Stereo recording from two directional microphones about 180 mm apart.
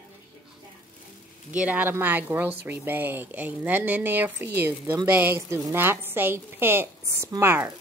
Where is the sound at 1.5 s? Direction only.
10° right (ahead or behind).